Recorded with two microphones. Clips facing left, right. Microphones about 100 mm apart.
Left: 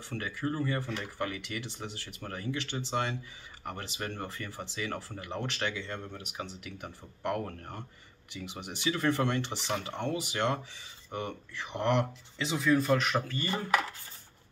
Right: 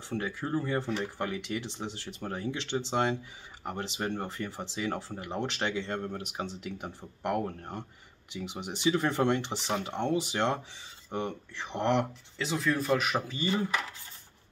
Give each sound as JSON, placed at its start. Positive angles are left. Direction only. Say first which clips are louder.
{"t": 0.1, "sound": "speech", "louder": "right 3 dB", "side_deg": -20}
{"t": 5.9, "sound": "speech", "louder": "right 6 dB", "side_deg": -45}
{"t": 6.8, "sound": "speech", "louder": "right 1 dB", "side_deg": -15}
{"t": 12.4, "sound": "speech", "louder": "left 2 dB", "side_deg": 0}